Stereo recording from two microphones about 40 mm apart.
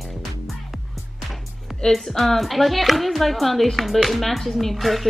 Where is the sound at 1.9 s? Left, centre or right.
Centre.